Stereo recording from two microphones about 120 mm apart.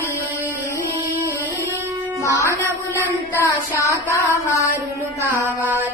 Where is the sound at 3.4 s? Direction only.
25° left (ahead or behind).